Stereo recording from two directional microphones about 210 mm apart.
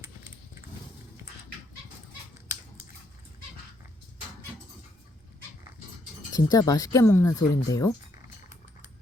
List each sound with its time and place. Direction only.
6.3 s speech: 15° left (ahead or behind)